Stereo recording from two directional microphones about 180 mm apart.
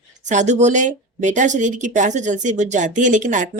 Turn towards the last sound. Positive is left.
turn(degrees=-45)  # may be behind; listen again after turning